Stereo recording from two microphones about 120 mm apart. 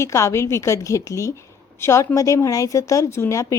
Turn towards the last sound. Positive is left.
turn(degrees=25)  # may be behind; listen again after turning